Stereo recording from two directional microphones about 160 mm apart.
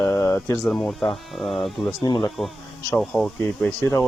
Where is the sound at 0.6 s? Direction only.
Centre (ahead or behind).